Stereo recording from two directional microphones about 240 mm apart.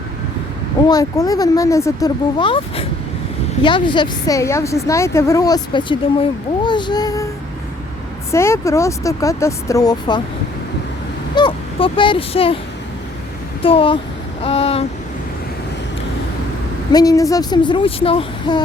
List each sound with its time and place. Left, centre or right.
0.9 s a woman's voice: centre
8.3 s a woman's voice: centre
11.3 s speech: centre
13.6 s speech: left
16.9 s speech: centre